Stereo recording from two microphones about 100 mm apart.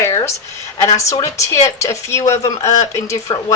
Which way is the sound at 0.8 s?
35° left (ahead or behind).